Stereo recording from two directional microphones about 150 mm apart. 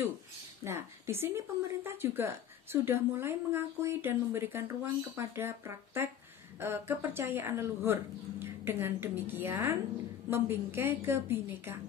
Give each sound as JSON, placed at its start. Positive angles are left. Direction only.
{"t": 0.7, "sound": "a woman's voice", "side_deg": -15}